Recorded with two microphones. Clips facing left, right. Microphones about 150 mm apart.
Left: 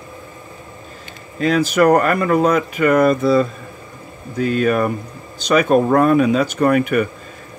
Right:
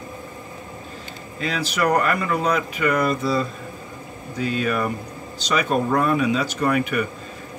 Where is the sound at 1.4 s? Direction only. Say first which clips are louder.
Left 9 dB; 50° left (ahead or behind).